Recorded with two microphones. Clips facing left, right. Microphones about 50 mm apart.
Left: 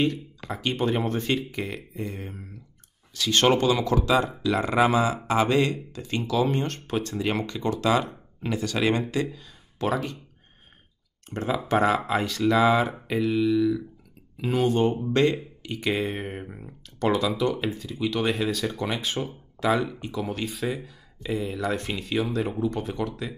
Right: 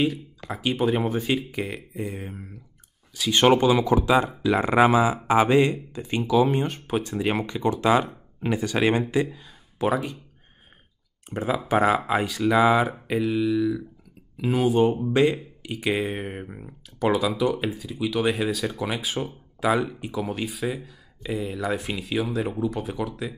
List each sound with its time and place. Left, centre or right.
0.5 s speech: centre
11.2 s speech: centre